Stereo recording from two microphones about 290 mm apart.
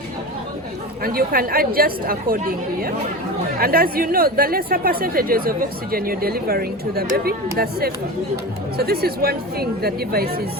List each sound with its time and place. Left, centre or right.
1.0 s speech: right